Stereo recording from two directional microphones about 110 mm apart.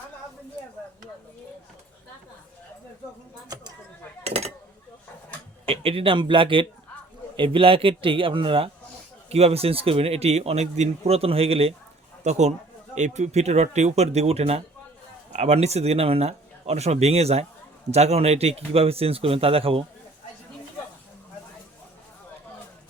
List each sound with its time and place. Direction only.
4.2 s a sound: 70° right (ahead or behind)
5.6 s a man's voice: 60° right (ahead or behind)
9.3 s a man's voice: 65° right (ahead or behind)
12.2 s a man's voice: 90° right; by 14.6 s 70° right (ahead or behind)
15.3 s a man's voice: 90° right; by 19.8 s 60° right (ahead or behind)